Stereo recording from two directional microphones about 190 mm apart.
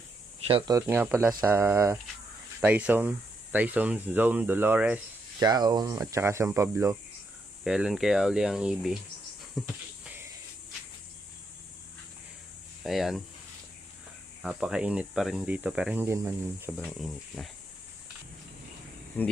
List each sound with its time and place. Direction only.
0.4 s speech: 25° right (ahead or behind); by 4.9 s 10° right (ahead or behind)
5.4 s speech: 20° right (ahead or behind)
7.6 s speech: 5° right (ahead or behind)
9.6 s a sound: 5° right (ahead or behind)
12.8 s speech: centre (ahead or behind)
14.4 s speech: 5° right (ahead or behind)
16.7 s speech: centre (ahead or behind)
19.2 s speech: 10° left (ahead or behind)